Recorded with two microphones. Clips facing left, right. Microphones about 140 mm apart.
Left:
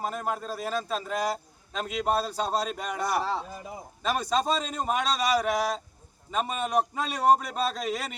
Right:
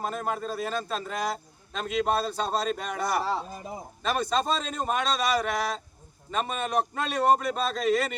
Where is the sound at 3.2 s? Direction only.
5° right (ahead or behind).